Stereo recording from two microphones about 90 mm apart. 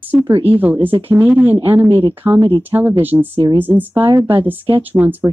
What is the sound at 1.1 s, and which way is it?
Speech, 20° right (ahead or behind).